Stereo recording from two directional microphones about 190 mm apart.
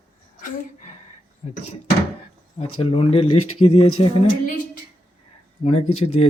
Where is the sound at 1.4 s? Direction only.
35° left (ahead or behind).